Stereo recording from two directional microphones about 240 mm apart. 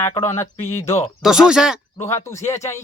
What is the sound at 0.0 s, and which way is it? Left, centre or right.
Speech, centre.